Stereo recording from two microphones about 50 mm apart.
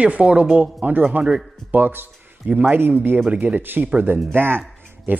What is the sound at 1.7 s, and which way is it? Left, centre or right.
Speech, right.